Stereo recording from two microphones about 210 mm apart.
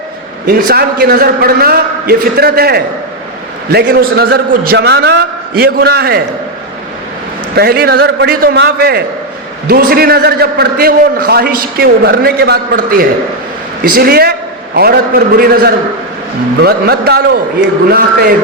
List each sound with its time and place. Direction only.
0.4 s a man's voice: 45° right (ahead or behind)
7.5 s a man's voice: 45° right (ahead or behind)